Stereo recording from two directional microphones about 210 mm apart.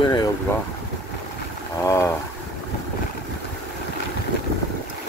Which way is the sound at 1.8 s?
15° left (ahead or behind).